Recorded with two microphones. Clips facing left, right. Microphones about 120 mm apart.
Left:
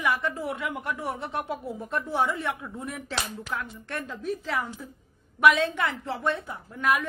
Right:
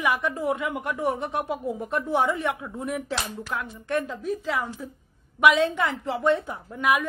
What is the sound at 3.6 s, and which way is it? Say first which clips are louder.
A woman's voice: right 7 dB; 15° right (ahead or behind).